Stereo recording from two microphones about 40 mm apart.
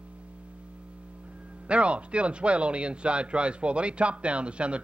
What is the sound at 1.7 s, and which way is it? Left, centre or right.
Speech, right.